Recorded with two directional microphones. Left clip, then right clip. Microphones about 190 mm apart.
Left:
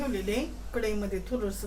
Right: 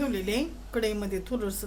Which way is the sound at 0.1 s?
55° right (ahead or behind).